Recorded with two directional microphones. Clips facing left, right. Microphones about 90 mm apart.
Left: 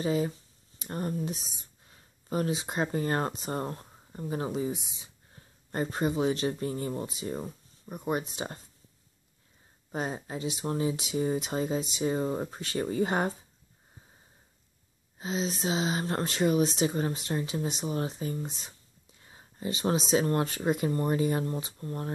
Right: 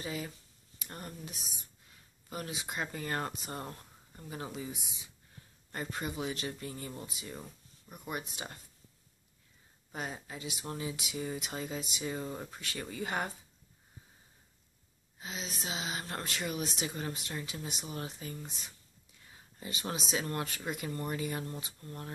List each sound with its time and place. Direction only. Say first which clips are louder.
0.0 s speech: left 11 dB; 30° left (ahead or behind)
9.8 s speech: left 7 dB; 30° left (ahead or behind)
15.1 s speech: left 10 dB; 25° left (ahead or behind)